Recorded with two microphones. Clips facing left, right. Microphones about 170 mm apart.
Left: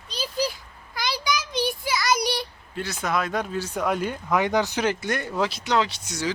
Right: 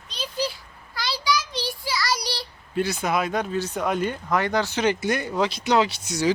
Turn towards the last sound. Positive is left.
turn(degrees=-10)  # may be behind; listen again after turning